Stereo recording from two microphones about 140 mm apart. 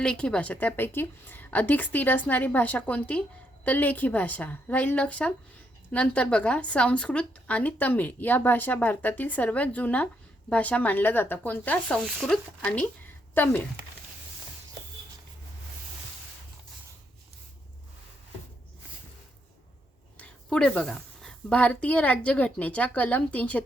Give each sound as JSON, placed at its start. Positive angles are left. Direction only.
{"t": 0.0, "sound": "a woman's voice", "side_deg": 5}
{"t": 20.1, "sound": "a woman's voice", "side_deg": 5}